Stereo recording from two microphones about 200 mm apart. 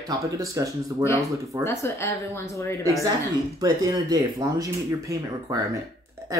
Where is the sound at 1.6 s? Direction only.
15° left (ahead or behind).